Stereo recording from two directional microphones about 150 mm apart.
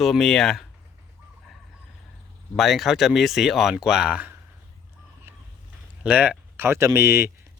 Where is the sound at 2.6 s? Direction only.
Centre (ahead or behind).